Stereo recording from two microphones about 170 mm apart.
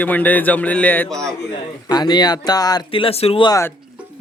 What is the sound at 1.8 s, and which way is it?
Speech, 25° left (ahead or behind).